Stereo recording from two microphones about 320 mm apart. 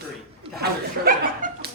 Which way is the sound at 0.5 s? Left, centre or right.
Right.